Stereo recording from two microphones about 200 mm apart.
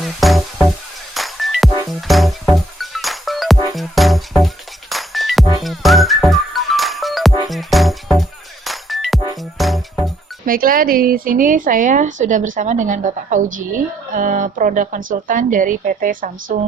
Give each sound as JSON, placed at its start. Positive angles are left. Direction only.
{"t": 0.0, "sound": "music", "side_deg": 0}
{"t": 10.4, "sound": "speech", "side_deg": -45}